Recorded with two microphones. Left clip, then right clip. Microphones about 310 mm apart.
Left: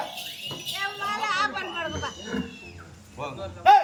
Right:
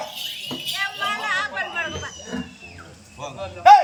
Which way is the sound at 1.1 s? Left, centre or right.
Left.